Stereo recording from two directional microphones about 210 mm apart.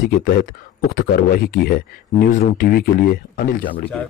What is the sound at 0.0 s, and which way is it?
Speech, 45° left (ahead or behind).